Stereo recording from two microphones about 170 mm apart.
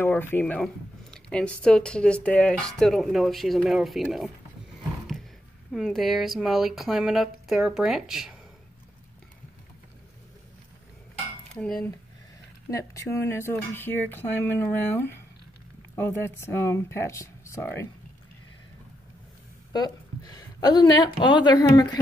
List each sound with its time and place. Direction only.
0.0 s speech: 10° left (ahead or behind)
5.7 s speech: centre (ahead or behind)
11.5 s cutlery: 5° left (ahead or behind)
12.7 s speech: 15° left (ahead or behind)
19.7 s speech: 25° left (ahead or behind)